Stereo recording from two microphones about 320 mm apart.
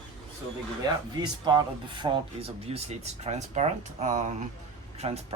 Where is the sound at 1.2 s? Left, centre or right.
Centre.